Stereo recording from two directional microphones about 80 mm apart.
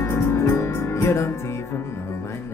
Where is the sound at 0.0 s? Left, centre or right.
Left.